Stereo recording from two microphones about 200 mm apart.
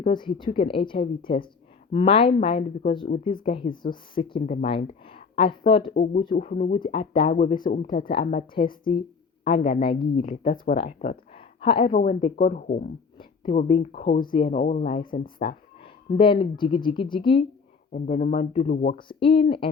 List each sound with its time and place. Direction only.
0.0 s a woman's voice: 25° left (ahead or behind); by 12.9 s 40° left (ahead or behind)
13.1 s a sound: 25° left (ahead or behind)
13.7 s speech: 30° left (ahead or behind)
17.9 s speech: 40° left (ahead or behind)
18.9 s a woman's voice: 25° left (ahead or behind)